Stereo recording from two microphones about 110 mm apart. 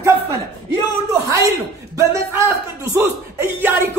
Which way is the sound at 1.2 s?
30° right (ahead or behind).